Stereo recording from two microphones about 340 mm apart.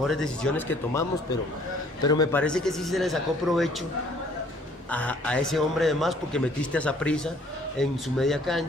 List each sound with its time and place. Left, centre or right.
0.0 s a man's voice: centre
2.0 s a man's voice: centre
4.9 s a man's voice: centre